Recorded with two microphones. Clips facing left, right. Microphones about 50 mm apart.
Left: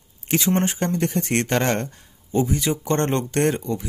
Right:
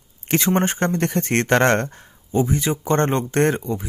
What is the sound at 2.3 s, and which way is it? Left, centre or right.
Speech, right.